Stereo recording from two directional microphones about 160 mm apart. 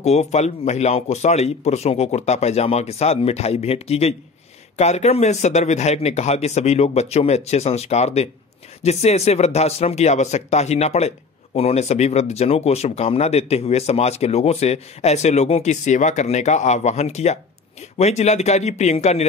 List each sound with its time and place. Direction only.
0.0 s speech: 45° left (ahead or behind)